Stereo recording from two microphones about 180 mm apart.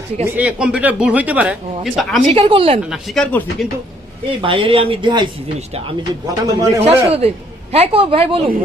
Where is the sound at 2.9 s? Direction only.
Centre (ahead or behind).